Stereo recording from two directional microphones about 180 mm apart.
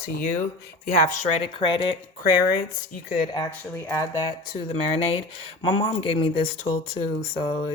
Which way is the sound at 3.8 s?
15° left (ahead or behind).